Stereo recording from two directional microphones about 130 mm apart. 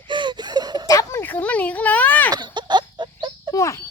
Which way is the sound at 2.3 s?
35° right (ahead or behind).